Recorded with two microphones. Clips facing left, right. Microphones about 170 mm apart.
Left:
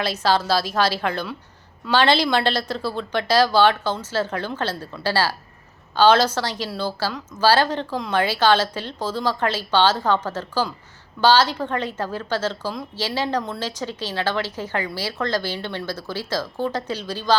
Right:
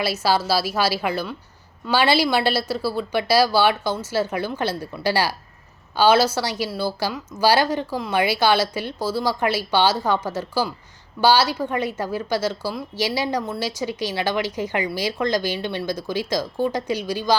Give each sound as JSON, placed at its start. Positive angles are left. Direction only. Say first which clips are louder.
{"t": 0.0, "sound": "a woman's voice", "louder": "even", "side_deg": -10}